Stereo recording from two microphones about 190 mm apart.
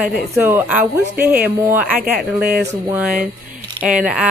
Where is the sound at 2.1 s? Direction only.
50° right (ahead or behind).